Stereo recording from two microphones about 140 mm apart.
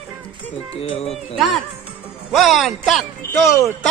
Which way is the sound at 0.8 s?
45° left (ahead or behind).